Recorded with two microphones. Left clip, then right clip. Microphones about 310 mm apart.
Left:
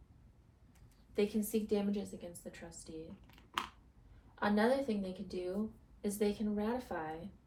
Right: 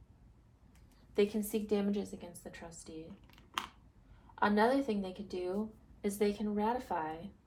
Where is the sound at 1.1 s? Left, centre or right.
Right.